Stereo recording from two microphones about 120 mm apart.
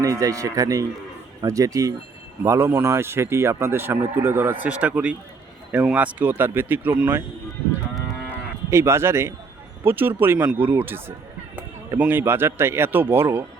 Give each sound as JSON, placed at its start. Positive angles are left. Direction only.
{"t": 0.0, "sound": "speech", "side_deg": -30}
{"t": 8.7, "sound": "speech", "side_deg": -20}